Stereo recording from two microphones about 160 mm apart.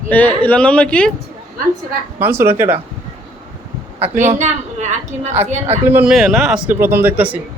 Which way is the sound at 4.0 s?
45° right (ahead or behind).